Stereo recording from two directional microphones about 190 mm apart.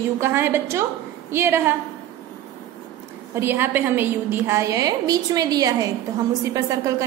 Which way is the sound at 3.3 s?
10° right (ahead or behind).